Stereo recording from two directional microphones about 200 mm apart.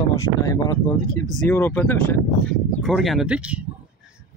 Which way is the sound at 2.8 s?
Centre (ahead or behind).